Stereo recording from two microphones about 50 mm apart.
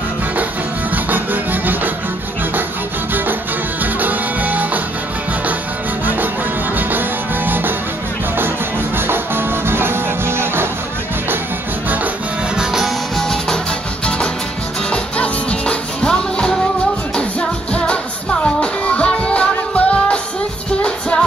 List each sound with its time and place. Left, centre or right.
0.9 s music: right
3.8 s music: right
6.9 s music: right
8.9 s music: right
12.5 s music: centre
14.9 s music: left